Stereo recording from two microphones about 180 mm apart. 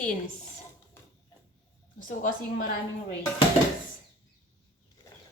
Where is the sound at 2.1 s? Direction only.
50° left (ahead or behind).